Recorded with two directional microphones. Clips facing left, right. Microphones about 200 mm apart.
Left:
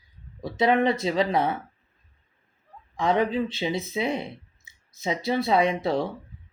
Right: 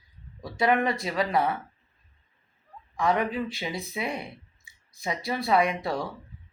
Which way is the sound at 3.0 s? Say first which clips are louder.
Left 3 dB; 20° left (ahead or behind).